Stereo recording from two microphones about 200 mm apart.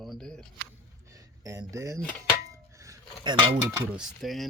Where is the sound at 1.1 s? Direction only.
15° right (ahead or behind).